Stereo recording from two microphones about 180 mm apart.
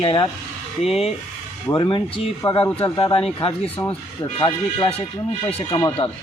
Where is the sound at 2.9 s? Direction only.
30° left (ahead or behind).